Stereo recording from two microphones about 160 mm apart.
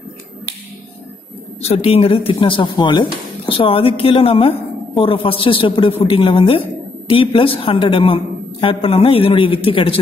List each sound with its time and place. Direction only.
1.6 s speech: 40° left (ahead or behind)